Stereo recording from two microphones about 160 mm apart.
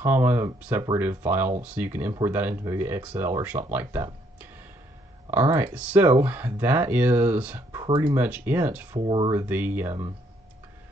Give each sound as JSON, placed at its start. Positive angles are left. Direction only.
{"t": 0.0, "sound": "speech", "side_deg": -15}
{"t": 7.8, "sound": "speech", "side_deg": -25}
{"t": 8.2, "sound": "speech", "side_deg": -10}
{"t": 9.0, "sound": "speech", "side_deg": -30}
{"t": 9.3, "sound": "speech", "side_deg": -15}